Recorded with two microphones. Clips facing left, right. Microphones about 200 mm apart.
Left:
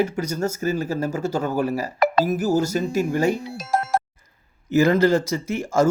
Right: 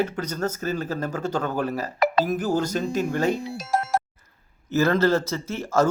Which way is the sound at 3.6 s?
55° left (ahead or behind).